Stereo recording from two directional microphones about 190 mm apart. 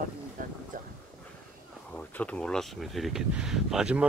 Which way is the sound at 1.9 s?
5° left (ahead or behind).